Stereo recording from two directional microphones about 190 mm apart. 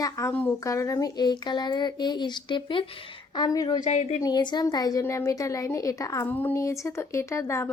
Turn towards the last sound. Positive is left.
turn(degrees=15)  # may be behind; listen again after turning